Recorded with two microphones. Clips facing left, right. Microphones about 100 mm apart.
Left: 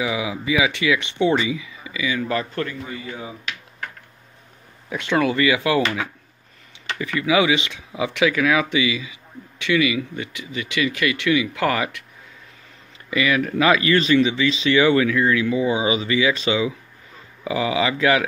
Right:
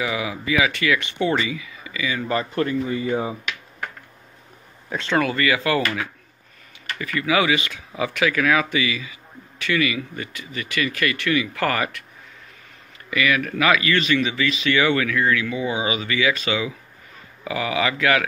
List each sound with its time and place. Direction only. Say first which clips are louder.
0.0 s speech: left 1 dB; 15° left (ahead or behind)
2.1 s speech: even; centre (ahead or behind)
2.5 s a man's voice: right 6 dB; 25° right (ahead or behind)
4.8 s speech: left 1 dB; 10° left (ahead or behind)
13.1 s speech: left 1 dB; 25° left (ahead or behind)